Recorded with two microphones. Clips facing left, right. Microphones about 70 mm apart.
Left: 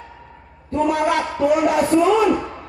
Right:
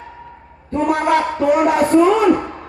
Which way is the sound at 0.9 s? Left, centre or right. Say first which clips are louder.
Right 3 dB; right.